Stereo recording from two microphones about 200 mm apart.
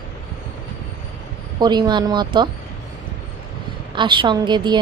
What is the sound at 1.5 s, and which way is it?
Speech, 20° right (ahead or behind).